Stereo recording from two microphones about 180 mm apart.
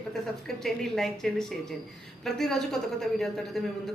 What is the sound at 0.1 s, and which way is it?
A woman's voice, centre (ahead or behind).